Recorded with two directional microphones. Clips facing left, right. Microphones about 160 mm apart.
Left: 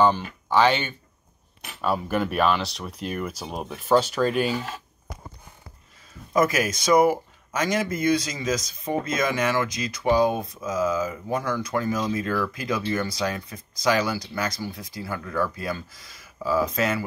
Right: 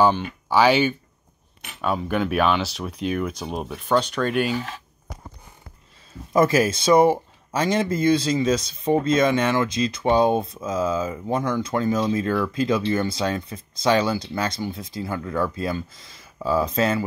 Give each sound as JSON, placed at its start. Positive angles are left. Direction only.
{"t": 0.0, "sound": "speech", "side_deg": -5}
{"t": 6.3, "sound": "speech", "side_deg": -30}